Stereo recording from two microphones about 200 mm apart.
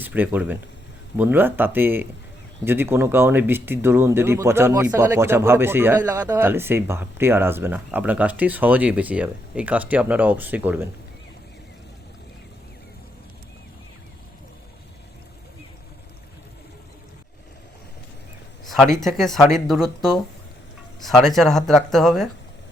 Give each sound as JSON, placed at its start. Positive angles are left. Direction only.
{"t": 0.0, "sound": "speech", "side_deg": -10}
{"t": 18.6, "sound": "speech", "side_deg": 0}